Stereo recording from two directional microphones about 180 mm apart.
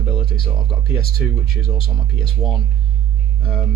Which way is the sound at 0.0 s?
30° left (ahead or behind).